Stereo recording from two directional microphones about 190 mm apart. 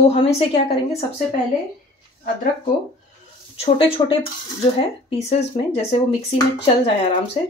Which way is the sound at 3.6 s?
30° left (ahead or behind).